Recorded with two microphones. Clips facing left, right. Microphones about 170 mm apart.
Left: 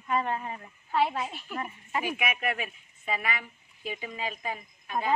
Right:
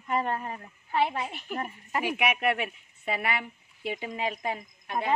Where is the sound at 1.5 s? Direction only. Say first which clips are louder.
Right 2 dB; 40° right (ahead or behind).